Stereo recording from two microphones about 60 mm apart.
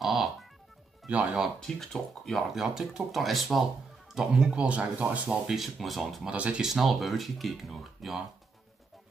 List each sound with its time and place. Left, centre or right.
0.0 s music: centre
1.0 s speech: centre
1.6 s speech: centre
2.5 s speech: centre; by 5.4 s right
5.5 s speech: centre
6.3 s speech: right
6.6 s speech: centre